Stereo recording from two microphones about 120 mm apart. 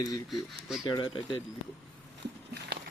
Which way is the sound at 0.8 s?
40° left (ahead or behind).